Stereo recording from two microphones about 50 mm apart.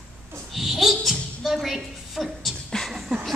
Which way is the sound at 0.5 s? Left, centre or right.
Centre.